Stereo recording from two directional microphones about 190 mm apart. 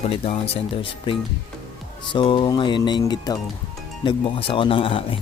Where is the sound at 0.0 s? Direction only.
35° left (ahead or behind).